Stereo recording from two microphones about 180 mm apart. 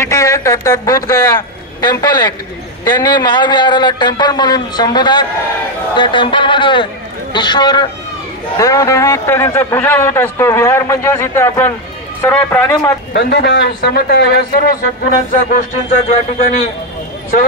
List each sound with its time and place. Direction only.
0.0 s a man's voice: 20° left (ahead or behind)
13.1 s a man's voice: 70° left (ahead or behind)
14.5 s a man's voice: 50° left (ahead or behind)